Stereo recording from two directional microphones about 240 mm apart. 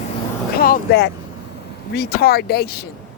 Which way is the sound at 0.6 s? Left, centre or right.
Left.